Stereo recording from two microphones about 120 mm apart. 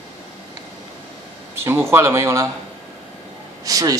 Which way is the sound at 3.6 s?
30° right (ahead or behind).